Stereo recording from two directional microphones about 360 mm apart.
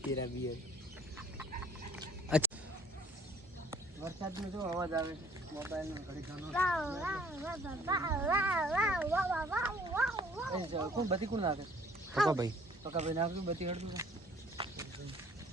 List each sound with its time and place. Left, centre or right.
1.4 s fowl: centre
3.7 s speech: centre
14.6 s a sound: centre